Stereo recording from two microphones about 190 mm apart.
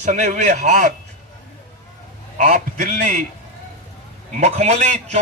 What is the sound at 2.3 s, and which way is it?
Speech, 45° right (ahead or behind).